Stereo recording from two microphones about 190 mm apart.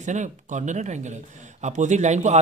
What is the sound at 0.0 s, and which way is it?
A man's voice, 40° right (ahead or behind).